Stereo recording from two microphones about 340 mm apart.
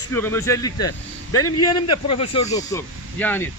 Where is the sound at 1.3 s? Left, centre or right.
Left.